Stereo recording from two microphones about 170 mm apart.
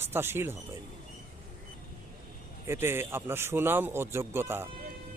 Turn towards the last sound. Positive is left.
turn(degrees=-15)  # may be behind; listen again after turning